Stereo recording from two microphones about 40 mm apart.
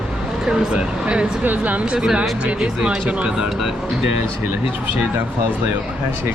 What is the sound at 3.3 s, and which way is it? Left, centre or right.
Speech, centre.